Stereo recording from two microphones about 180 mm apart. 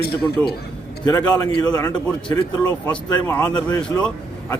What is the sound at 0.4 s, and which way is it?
Speech, 10° left (ahead or behind).